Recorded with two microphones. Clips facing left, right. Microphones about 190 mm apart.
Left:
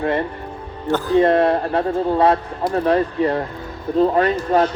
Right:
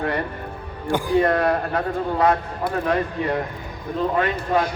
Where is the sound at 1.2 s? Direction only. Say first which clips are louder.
Left 4 dB; 25° left (ahead or behind).